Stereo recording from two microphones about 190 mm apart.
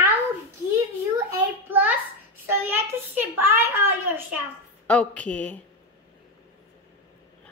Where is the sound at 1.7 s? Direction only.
10° right (ahead or behind).